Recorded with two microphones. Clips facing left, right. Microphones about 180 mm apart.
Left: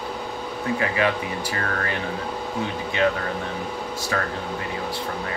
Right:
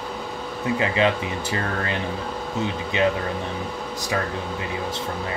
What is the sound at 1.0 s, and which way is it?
Speech, 25° right (ahead or behind).